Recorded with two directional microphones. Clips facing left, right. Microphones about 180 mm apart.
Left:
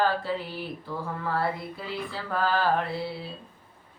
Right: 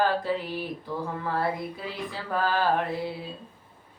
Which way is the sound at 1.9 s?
15° right (ahead or behind).